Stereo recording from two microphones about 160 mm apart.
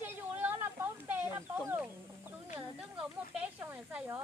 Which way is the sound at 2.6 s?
5° right (ahead or behind).